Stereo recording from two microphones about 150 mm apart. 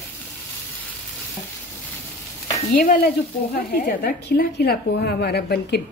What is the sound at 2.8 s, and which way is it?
Speech, 75° left (ahead or behind).